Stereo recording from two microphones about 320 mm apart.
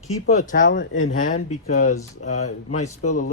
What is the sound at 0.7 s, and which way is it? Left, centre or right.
Speech, left.